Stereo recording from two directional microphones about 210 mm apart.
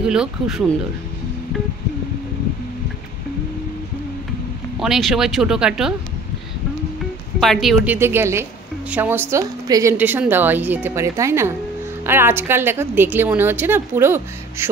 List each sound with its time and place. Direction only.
0.0 s speech: 5° right (ahead or behind)
4.7 s speech: centre (ahead or behind)
7.3 s a woman's voice: centre (ahead or behind)